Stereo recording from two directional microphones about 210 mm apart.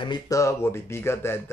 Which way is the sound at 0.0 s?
20° left (ahead or behind).